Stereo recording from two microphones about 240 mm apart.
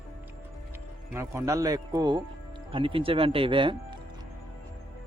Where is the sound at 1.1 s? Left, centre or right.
Centre.